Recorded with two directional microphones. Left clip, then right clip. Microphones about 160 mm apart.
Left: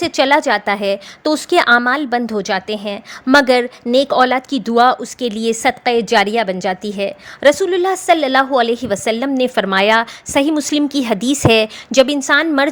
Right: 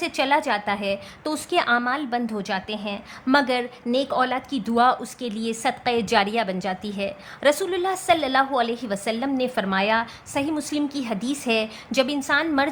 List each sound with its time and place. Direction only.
0.0 s a woman's voice: 45° left (ahead or behind)